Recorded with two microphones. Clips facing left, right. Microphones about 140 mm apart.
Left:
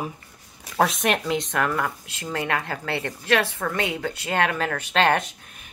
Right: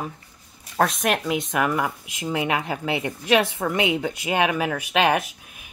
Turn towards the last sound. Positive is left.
turn(degrees=-10)  # may be behind; listen again after turning